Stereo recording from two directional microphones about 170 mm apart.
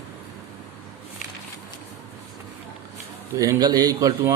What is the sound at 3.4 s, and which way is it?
Speech, 20° right (ahead or behind).